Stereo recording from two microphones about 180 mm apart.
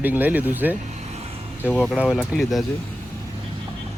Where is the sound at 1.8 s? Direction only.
5° right (ahead or behind).